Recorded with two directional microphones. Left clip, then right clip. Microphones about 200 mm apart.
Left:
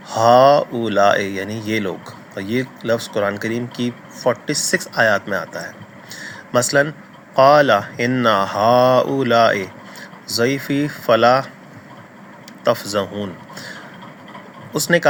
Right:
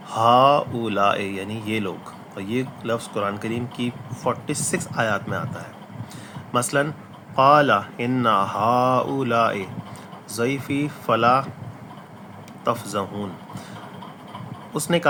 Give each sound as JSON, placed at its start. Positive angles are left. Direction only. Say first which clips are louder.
{"t": 0.1, "sound": "speech", "louder": "left 5 dB", "side_deg": 20}
{"t": 6.1, "sound": "a sound", "louder": "left 6 dB", "side_deg": 20}
{"t": 7.3, "sound": "speech", "louder": "left 4 dB", "side_deg": 25}
{"t": 12.6, "sound": "speech", "louder": "left 6 dB", "side_deg": 20}
{"t": 14.7, "sound": "speech", "louder": "left 6 dB", "side_deg": 20}